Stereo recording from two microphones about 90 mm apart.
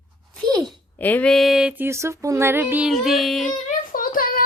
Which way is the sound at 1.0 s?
20° left (ahead or behind).